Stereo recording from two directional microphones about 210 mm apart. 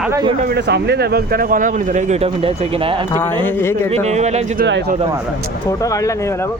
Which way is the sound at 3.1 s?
10° left (ahead or behind).